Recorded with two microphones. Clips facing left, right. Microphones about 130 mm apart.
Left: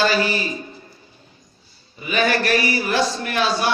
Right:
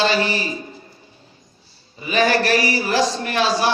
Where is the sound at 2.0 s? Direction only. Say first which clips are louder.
Right 2 dB; 30° right (ahead or behind).